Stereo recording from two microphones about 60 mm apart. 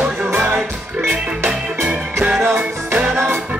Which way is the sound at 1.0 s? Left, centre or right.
Right.